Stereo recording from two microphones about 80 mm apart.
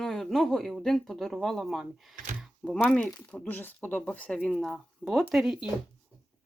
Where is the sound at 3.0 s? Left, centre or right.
Centre.